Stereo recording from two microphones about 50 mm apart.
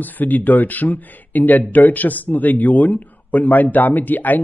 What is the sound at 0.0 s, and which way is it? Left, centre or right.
A man's voice, left.